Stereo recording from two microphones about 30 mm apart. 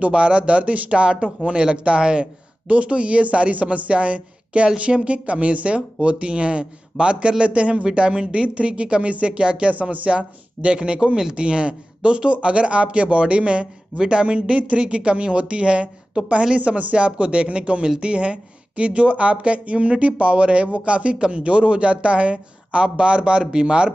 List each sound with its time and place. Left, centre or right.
0.0 s a man's voice: right
9.7 s speech: right
10.1 s a man's voice: right